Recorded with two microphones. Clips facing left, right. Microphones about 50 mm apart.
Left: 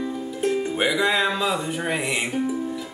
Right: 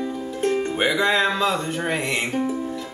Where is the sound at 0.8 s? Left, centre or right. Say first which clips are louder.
Right 1 dB; centre.